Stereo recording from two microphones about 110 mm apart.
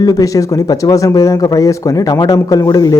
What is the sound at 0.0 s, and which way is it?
Speech, 35° left (ahead or behind).